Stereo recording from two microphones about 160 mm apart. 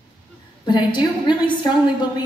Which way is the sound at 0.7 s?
30° left (ahead or behind).